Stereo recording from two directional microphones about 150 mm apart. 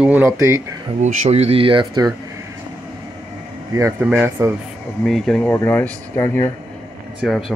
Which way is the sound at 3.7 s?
20° right (ahead or behind).